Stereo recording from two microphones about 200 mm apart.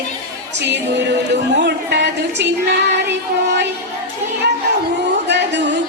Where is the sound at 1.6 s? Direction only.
55° right (ahead or behind).